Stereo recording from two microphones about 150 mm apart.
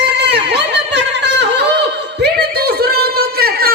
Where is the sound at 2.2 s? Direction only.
90° right.